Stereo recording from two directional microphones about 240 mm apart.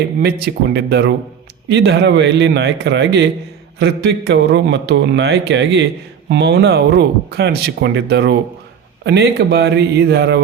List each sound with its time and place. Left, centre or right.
0.2 s speech: right